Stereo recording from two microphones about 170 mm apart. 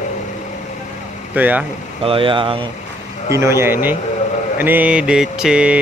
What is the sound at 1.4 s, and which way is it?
Mantra, 10° right (ahead or behind).